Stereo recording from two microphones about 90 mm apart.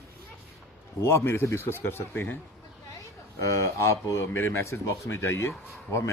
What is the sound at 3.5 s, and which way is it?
A man's voice, 30° left (ahead or behind).